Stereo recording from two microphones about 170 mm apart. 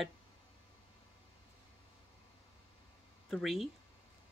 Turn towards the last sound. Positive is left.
turn(degrees=0)  # may be behind; listen again after turning